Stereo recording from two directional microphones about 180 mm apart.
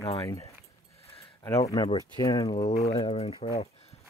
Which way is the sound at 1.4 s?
15° left (ahead or behind).